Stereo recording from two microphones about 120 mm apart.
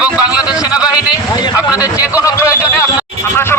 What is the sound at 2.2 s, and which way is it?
Speech, 25° left (ahead or behind).